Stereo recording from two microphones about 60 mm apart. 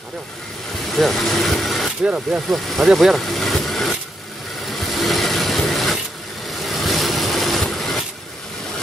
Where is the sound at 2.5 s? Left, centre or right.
Centre.